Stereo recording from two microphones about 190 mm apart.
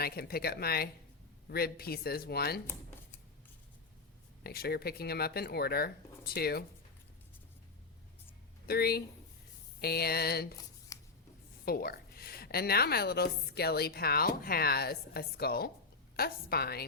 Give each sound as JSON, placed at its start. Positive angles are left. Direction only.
{"t": 0.0, "sound": "a woman's voice", "side_deg": 55}
{"t": 4.4, "sound": "a woman's voice", "side_deg": 55}
{"t": 8.6, "sound": "a woman's voice", "side_deg": 55}
{"t": 10.9, "sound": "a sound", "side_deg": 15}
{"t": 11.6, "sound": "a woman's voice", "side_deg": 55}